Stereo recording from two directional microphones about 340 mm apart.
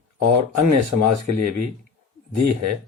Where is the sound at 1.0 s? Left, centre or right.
Right.